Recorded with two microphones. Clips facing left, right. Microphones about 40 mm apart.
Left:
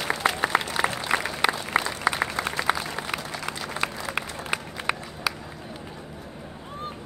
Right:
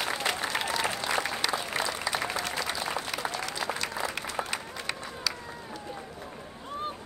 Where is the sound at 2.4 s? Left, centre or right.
Left.